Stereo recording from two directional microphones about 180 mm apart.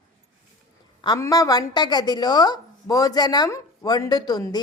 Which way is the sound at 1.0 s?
20° left (ahead or behind).